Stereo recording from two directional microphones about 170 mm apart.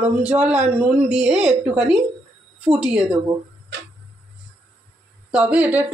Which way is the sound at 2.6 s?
5° right (ahead or behind).